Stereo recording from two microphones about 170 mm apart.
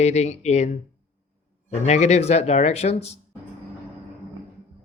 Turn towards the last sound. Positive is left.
turn(degrees=40)  # may be behind; listen again after turning